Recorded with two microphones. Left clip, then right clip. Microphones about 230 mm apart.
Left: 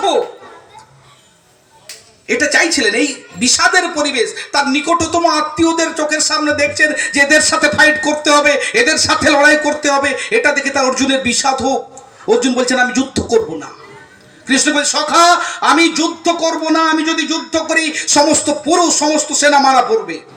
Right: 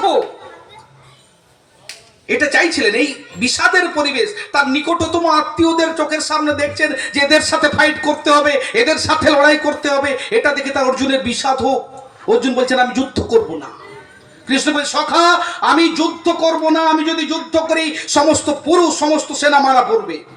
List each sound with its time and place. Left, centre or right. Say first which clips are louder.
2.2 s speech: left 1 dB; left